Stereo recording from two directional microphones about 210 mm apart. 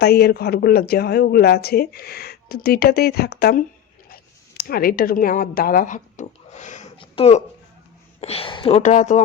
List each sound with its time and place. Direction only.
0.0 s speech: 50° left (ahead or behind)